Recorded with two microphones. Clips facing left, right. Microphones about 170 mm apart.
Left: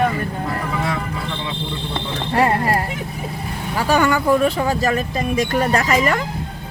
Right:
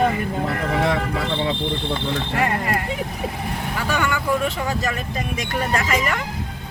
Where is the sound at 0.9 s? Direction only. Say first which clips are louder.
Right 3 dB; 75° right (ahead or behind).